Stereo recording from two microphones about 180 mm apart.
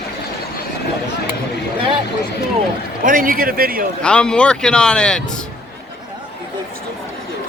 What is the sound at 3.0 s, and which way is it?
Speech, 50° right (ahead or behind).